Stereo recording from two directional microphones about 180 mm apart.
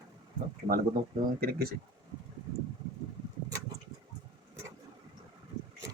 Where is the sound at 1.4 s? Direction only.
55° right (ahead or behind).